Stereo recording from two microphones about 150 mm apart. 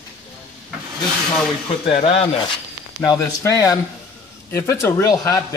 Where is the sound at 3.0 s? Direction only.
20° left (ahead or behind).